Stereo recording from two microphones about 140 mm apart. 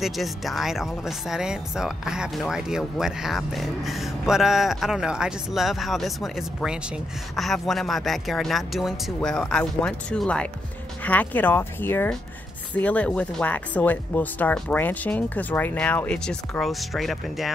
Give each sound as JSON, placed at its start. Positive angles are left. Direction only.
{"t": 0.0, "sound": "speech", "side_deg": 0}